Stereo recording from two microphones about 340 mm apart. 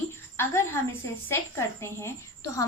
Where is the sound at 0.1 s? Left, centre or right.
Centre.